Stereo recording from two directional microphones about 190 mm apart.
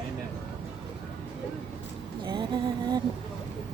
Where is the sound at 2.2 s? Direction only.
25° right (ahead or behind).